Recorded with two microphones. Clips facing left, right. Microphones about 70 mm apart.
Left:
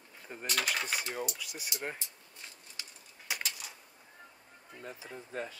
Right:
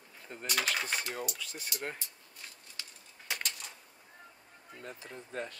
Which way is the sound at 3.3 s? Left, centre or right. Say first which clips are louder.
Even; centre.